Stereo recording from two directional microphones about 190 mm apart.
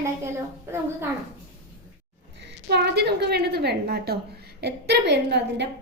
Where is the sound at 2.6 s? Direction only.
60° right (ahead or behind).